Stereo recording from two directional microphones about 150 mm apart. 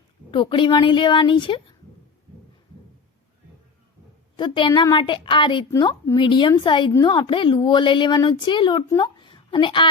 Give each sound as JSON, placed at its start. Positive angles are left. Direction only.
{"t": 0.3, "sound": "a woman's voice", "side_deg": 35}
{"t": 4.4, "sound": "a woman's voice", "side_deg": 30}